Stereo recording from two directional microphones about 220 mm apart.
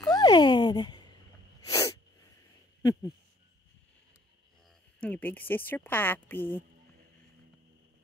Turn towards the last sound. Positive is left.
turn(degrees=10)  # may be behind; listen again after turning